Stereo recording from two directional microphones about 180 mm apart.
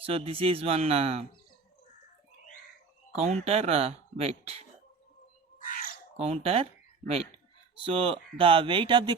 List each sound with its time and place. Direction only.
0.0 s speech: 30° right (ahead or behind)
3.2 s speech: 35° right (ahead or behind)
5.5 s cat: 50° left (ahead or behind)
6.1 s speech: 35° right (ahead or behind)
7.9 s speech: 30° right (ahead or behind)